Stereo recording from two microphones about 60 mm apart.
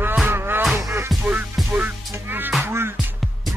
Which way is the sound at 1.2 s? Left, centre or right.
Right.